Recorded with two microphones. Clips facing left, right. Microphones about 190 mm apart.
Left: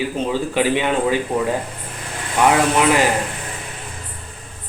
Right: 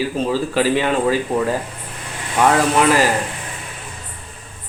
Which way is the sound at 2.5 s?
20° left (ahead or behind).